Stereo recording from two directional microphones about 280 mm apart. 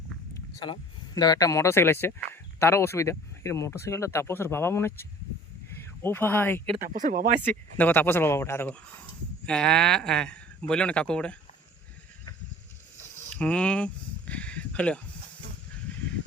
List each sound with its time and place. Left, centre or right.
0.6 s speech: centre
6.8 s speech: right
7.4 s speech: centre
13.3 s a sound: centre